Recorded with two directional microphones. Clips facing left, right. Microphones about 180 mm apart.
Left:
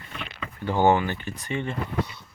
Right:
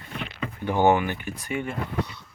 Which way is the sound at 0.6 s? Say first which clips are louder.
Even; 15° right (ahead or behind).